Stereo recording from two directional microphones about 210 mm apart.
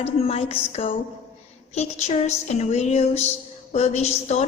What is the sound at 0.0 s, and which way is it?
A woman's voice, 30° left (ahead or behind).